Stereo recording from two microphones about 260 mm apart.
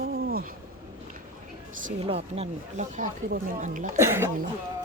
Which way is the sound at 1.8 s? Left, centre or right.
Right.